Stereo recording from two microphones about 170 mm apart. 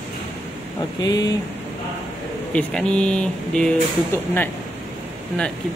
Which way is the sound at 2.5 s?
5° left (ahead or behind).